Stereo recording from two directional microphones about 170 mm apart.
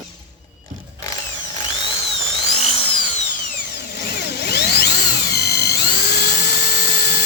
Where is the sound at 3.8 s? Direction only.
70° left (ahead or behind).